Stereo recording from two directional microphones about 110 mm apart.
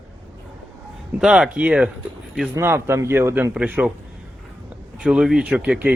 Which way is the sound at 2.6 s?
25° right (ahead or behind).